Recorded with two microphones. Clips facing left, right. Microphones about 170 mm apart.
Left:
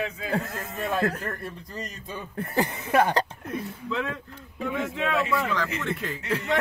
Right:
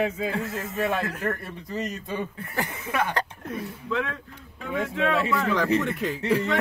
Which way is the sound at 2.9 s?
35° left (ahead or behind).